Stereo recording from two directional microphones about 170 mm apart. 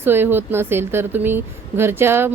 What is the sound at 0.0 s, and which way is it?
Speech, 10° right (ahead or behind).